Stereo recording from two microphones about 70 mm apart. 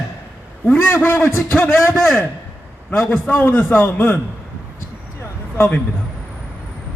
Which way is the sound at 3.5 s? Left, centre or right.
Centre.